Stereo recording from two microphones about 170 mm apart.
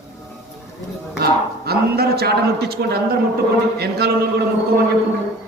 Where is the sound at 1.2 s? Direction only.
65° right (ahead or behind).